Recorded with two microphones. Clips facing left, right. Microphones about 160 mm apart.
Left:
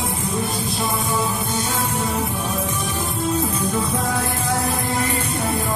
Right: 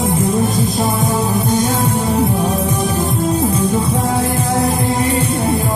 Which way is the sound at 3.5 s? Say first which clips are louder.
Right 6 dB; 30° right (ahead or behind).